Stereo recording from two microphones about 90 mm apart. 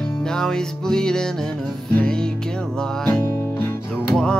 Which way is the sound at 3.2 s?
25° left (ahead or behind).